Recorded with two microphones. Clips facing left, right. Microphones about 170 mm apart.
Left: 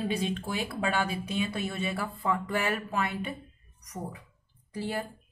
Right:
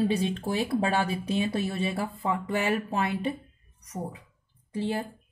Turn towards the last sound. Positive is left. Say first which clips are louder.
# right 4 dB
turn(degrees=-25)  # may be behind; listen again after turning